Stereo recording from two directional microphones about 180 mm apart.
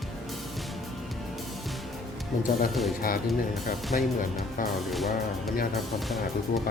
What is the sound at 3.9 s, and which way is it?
Speech, 45° left (ahead or behind).